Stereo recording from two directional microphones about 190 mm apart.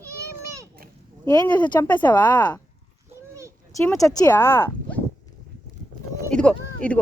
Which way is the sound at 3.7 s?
15° left (ahead or behind).